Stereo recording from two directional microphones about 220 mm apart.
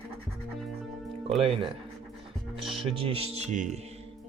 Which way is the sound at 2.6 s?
Centre (ahead or behind).